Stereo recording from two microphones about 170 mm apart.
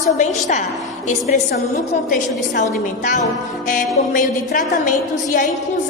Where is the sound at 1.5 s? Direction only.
65° left (ahead or behind).